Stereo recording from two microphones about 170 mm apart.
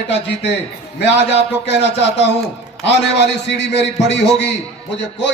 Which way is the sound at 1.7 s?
90° left.